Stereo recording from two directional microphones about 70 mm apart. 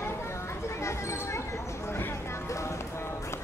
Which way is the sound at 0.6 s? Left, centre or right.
Left.